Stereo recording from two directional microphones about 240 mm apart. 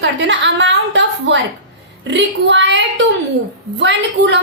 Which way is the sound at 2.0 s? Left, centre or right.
Right.